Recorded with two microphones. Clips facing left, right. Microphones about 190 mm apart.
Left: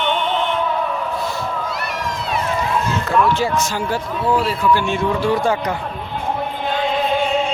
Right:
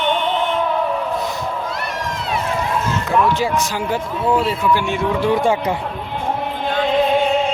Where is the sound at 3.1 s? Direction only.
15° right (ahead or behind).